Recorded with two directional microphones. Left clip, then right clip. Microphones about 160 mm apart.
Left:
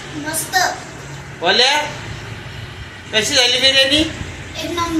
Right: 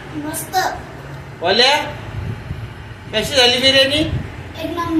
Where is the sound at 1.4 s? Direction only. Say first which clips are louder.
Even; 20° left (ahead or behind).